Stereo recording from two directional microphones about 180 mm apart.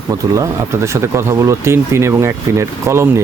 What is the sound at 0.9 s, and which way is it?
Speech, 15° right (ahead or behind).